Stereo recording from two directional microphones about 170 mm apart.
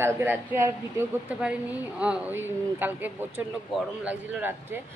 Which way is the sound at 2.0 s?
10° right (ahead or behind).